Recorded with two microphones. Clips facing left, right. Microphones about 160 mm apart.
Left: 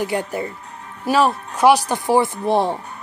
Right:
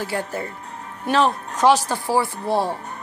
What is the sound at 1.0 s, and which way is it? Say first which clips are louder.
Speech: left 2 dB; 5° left (ahead or behind).